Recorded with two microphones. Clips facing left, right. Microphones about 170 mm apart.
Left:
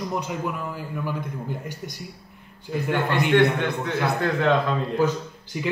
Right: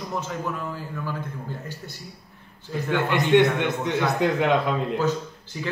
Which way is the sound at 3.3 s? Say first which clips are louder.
Right 2 dB; 20° right (ahead or behind).